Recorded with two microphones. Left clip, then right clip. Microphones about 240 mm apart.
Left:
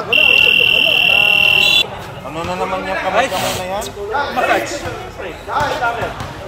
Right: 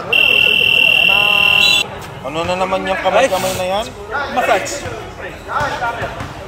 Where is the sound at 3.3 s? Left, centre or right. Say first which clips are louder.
Right 1 dB; centre.